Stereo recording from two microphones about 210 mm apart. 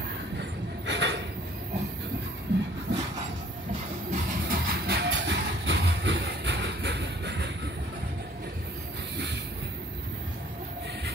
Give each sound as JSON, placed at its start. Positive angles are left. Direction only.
{"t": 0.8, "sound": "a sound", "side_deg": -55}
{"t": 2.9, "sound": "train", "side_deg": -55}
{"t": 4.1, "sound": "vehicle", "side_deg": -45}